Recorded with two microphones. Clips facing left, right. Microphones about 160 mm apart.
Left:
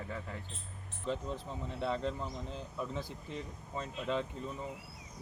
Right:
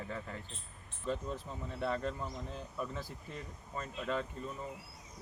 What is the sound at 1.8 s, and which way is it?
Speech, 15° left (ahead or behind).